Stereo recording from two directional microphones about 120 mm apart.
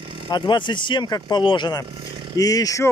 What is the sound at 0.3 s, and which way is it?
Speech, 40° left (ahead or behind).